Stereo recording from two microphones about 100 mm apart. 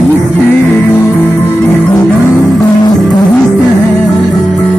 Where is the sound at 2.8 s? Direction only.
40° left (ahead or behind).